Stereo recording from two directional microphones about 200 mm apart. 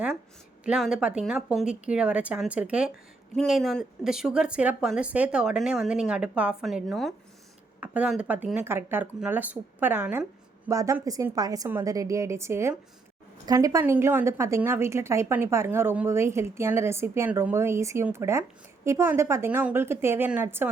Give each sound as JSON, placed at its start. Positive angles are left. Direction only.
{"t": 0.6, "sound": "a woman's voice", "side_deg": -5}